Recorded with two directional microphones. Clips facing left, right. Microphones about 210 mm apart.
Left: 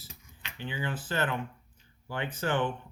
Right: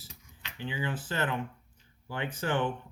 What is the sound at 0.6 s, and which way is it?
Speech, 20° right (ahead or behind).